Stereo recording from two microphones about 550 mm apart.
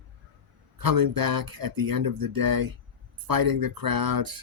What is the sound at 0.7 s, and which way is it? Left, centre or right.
Speech, right.